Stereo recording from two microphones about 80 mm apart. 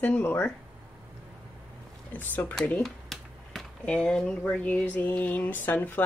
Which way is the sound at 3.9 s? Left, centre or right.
Centre.